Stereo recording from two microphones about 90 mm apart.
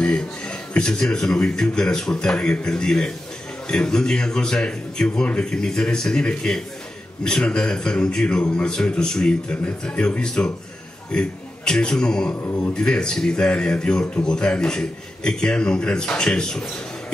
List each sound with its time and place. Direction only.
0.0 s a man's voice: 10° left (ahead or behind)
12.4 s a man's voice: 25° left (ahead or behind)
12.7 s a man's voice: 10° left (ahead or behind)